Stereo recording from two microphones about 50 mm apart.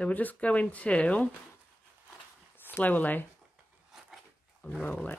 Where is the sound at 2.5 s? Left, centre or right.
Left.